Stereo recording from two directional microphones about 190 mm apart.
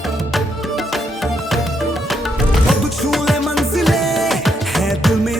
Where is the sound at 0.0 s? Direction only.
Centre (ahead or behind).